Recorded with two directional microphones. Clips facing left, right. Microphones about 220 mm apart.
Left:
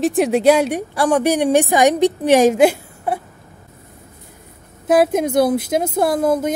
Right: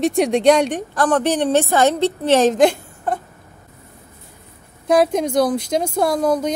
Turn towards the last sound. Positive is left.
turn(degrees=5)  # may be behind; listen again after turning